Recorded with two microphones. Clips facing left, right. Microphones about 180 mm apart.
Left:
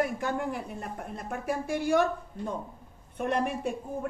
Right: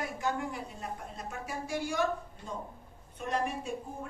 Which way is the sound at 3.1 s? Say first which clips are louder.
Left 4 dB; 60° left (ahead or behind).